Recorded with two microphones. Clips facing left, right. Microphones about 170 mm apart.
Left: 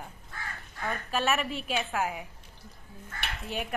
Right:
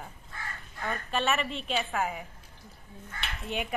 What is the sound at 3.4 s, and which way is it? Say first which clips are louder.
Speech: right 2 dB; centre (ahead or behind).